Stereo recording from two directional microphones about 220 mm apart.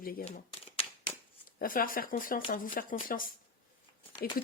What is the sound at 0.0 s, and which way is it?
Speech, 40° left (ahead or behind).